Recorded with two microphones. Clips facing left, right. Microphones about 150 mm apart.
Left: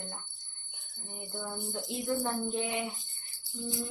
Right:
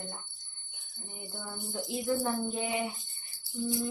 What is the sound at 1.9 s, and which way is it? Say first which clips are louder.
Speech: right 2 dB; centre (ahead or behind).